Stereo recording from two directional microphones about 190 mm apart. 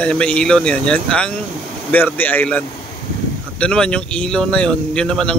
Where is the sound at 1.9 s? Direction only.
10° left (ahead or behind).